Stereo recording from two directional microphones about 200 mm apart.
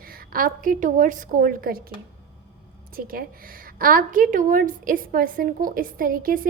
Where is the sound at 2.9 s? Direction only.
45° right (ahead or behind).